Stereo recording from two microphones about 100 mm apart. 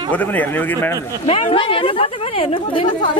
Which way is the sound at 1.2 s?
65° left (ahead or behind).